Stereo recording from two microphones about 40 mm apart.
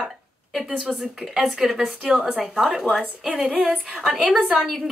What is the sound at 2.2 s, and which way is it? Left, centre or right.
Speech, right.